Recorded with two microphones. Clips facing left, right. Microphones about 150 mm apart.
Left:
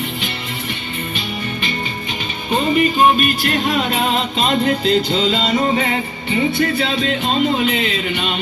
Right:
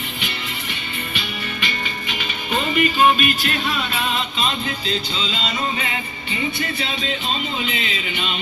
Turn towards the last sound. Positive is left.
turn(degrees=45)  # may be behind; listen again after turning